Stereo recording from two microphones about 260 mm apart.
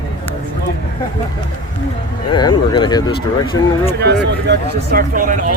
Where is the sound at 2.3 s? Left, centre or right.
Centre.